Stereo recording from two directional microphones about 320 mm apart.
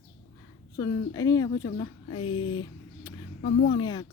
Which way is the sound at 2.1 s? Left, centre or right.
Left.